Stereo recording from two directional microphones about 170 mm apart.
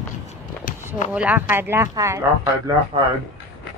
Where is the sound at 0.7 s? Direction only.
45° left (ahead or behind).